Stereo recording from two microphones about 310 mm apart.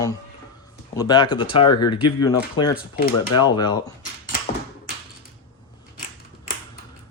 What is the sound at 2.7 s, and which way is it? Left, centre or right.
Speech, left.